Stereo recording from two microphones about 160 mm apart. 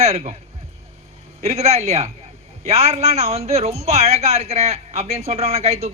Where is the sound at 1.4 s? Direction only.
40° right (ahead or behind).